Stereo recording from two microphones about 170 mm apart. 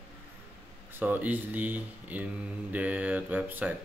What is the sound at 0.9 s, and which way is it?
Speech, 10° right (ahead or behind).